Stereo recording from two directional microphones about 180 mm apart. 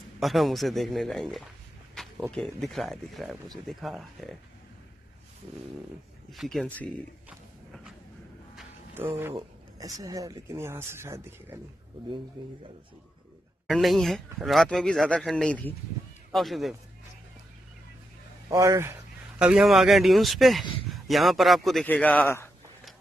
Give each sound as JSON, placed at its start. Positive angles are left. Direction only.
{"t": 0.2, "sound": "speech", "side_deg": 0}
{"t": 2.0, "sound": "a sound", "side_deg": 0}
{"t": 2.3, "sound": "speech", "side_deg": 0}
{"t": 6.3, "sound": "speech", "side_deg": 0}
{"t": 7.2, "sound": "pig", "side_deg": -5}
{"t": 8.9, "sound": "speech", "side_deg": -10}
{"t": 12.4, "sound": "speech", "side_deg": -25}
{"t": 13.7, "sound": "a man's voice", "side_deg": 0}
{"t": 18.5, "sound": "speech", "side_deg": -15}